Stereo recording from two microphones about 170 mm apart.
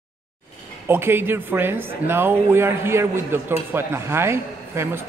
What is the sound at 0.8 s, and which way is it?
A man's voice, 15° right (ahead or behind).